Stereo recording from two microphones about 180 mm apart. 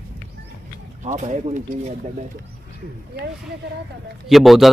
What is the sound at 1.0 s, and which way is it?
Speech, 40° right (ahead or behind).